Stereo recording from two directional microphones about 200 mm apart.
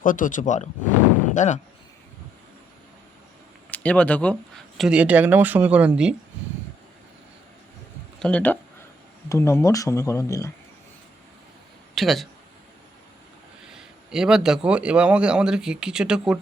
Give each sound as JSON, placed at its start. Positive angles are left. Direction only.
{"t": 0.0, "sound": "speech", "side_deg": 40}
{"t": 3.7, "sound": "a man's voice", "side_deg": 5}
{"t": 8.2, "sound": "speech", "side_deg": 5}
{"t": 11.9, "sound": "a man's voice", "side_deg": 0}
{"t": 13.7, "sound": "a man's voice", "side_deg": -5}